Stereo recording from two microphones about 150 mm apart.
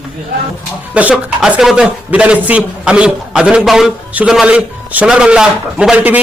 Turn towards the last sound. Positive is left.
turn(degrees=-10)  # may be behind; listen again after turning